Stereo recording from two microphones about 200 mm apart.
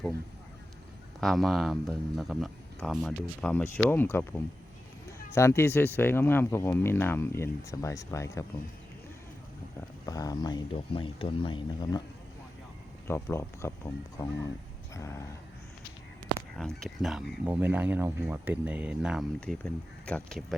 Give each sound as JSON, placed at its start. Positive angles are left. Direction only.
{"t": 1.2, "sound": "speech", "side_deg": 0}
{"t": 10.1, "sound": "speech", "side_deg": 20}
{"t": 13.1, "sound": "speech", "side_deg": 15}
{"t": 16.6, "sound": "speech", "side_deg": 0}